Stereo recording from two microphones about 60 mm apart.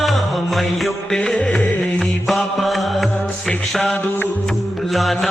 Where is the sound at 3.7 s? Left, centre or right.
Centre.